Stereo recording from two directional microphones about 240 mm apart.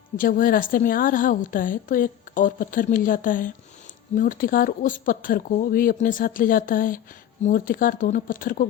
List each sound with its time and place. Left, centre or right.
0.2 s a woman's voice: left